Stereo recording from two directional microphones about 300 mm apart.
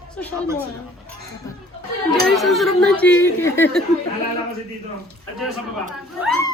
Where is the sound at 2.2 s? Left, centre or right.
Centre.